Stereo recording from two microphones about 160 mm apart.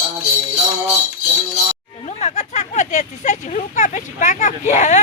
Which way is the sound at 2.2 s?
45° left (ahead or behind).